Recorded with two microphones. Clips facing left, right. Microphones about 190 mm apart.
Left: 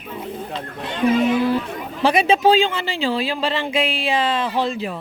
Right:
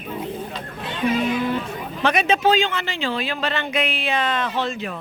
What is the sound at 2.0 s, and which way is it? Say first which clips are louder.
Speech: left 3 dB; 30° left (ahead or behind).